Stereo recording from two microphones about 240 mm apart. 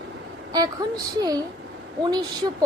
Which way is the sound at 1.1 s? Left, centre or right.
Centre.